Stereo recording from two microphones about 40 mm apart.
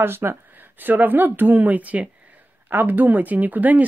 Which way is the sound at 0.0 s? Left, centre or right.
Right.